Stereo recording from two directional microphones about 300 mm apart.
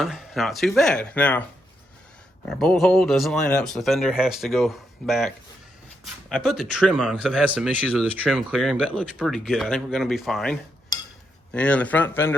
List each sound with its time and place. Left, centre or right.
0.0 s speech: centre
2.6 s speech: centre